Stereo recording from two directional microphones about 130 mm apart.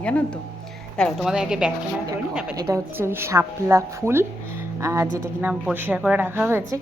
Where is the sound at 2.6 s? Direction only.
25° right (ahead or behind).